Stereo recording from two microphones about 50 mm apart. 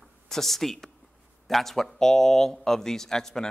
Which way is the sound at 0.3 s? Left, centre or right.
Centre.